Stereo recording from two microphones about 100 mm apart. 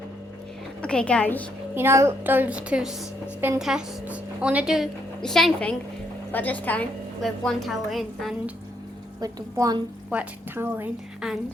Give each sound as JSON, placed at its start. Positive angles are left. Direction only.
{"t": 0.8, "sound": "a woman's voice", "side_deg": 10}
{"t": 1.7, "sound": "a woman's voice", "side_deg": -25}
{"t": 5.2, "sound": "a woman's voice", "side_deg": 5}
{"t": 7.2, "sound": "a woman's voice", "side_deg": 0}
{"t": 9.2, "sound": "a woman's voice", "side_deg": -40}
{"t": 10.1, "sound": "a woman's voice", "side_deg": -20}
{"t": 11.2, "sound": "a woman's voice", "side_deg": -5}